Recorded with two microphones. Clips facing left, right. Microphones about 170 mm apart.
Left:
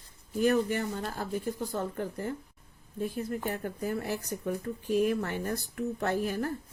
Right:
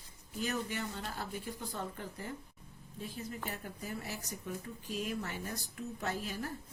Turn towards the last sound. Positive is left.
turn(degrees=55)  # may be behind; listen again after turning